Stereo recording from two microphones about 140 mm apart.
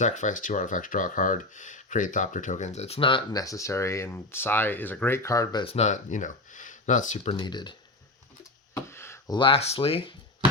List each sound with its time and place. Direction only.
0.0 s speech: 60° left (ahead or behind); by 5.6 s 25° left (ahead or behind)
5.6 s speech: 50° left (ahead or behind)
7.3 s speech: 35° left (ahead or behind)
8.7 s a sound: 20° left (ahead or behind)
9.3 s speech: 40° left (ahead or behind)